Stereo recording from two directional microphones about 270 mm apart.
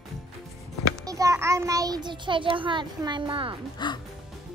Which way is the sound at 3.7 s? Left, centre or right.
Centre.